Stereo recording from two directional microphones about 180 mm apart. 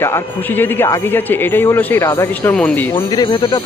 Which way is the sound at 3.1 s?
25° left (ahead or behind).